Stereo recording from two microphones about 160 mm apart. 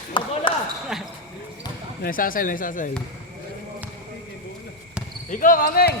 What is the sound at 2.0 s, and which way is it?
Speech, 60° left (ahead or behind).